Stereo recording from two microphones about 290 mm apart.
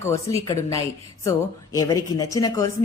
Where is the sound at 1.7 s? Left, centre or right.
Centre.